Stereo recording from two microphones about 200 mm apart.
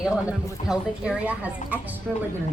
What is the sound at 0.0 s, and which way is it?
Speech, 5° right (ahead or behind).